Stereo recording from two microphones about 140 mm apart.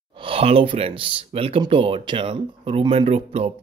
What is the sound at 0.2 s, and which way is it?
Speech, 45° right (ahead or behind).